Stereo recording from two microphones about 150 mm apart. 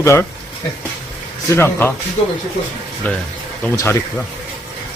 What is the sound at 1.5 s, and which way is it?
Speech, 15° left (ahead or behind).